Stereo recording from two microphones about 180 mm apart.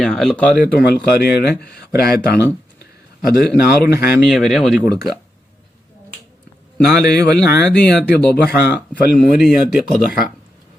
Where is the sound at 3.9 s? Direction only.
55° left (ahead or behind).